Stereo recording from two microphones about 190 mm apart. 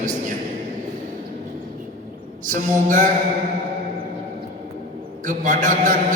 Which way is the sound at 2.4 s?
45° right (ahead or behind).